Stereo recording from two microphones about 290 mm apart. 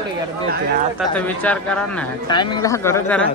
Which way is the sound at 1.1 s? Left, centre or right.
Centre.